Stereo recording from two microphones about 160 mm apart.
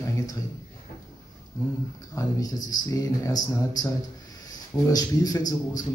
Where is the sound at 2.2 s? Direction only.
20° left (ahead or behind).